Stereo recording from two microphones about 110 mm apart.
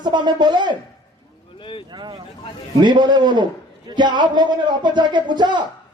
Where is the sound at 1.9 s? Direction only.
45° right (ahead or behind).